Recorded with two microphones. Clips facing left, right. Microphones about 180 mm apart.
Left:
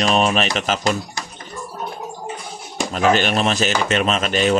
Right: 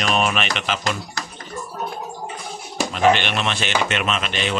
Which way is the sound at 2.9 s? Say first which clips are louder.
Left 1 dB; 40° left (ahead or behind).